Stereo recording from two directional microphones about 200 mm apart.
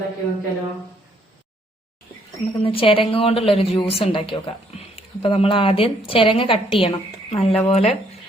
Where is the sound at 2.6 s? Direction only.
25° left (ahead or behind).